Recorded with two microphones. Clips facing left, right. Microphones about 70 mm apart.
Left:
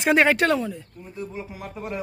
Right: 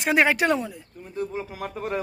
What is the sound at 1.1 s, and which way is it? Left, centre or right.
Speech, right.